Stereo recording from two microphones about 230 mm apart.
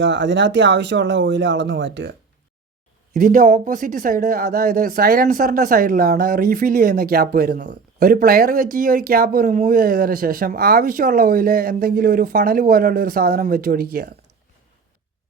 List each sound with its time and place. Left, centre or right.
0.0 s speech: right
3.1 s speech: right